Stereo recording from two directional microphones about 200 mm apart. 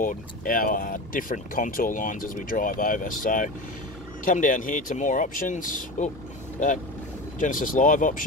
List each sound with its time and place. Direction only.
0.0 s speech: 45° left (ahead or behind)
7.3 s speech: 40° left (ahead or behind)